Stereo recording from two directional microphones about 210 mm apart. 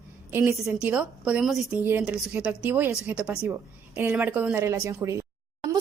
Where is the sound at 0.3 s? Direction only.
10° right (ahead or behind).